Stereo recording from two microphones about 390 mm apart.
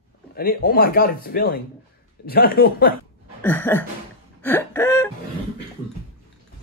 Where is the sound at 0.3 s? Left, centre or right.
Left.